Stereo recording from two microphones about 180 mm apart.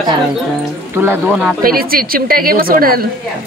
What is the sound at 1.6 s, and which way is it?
Speech, 55° right (ahead or behind).